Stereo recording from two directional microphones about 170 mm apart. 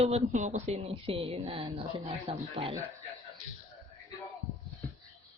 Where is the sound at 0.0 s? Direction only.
40° right (ahead or behind).